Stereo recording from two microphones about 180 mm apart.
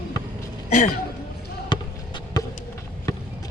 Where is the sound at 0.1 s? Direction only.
20° left (ahead or behind).